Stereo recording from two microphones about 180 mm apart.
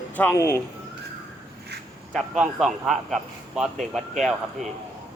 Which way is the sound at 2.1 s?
Centre (ahead or behind).